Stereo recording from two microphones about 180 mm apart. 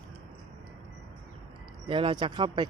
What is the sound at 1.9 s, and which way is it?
Speech, 30° right (ahead or behind).